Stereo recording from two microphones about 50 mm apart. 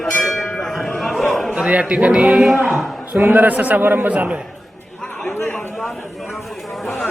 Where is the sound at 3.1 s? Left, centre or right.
Right.